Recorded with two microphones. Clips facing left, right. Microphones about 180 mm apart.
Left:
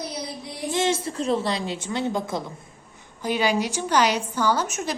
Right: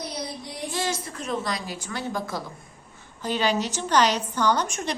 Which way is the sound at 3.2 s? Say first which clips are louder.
Left 2 dB; 10° left (ahead or behind).